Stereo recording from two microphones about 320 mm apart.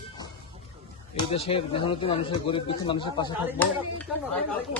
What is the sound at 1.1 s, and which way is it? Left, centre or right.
Speech, centre.